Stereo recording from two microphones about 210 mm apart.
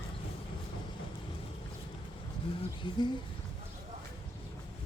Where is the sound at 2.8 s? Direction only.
20° left (ahead or behind).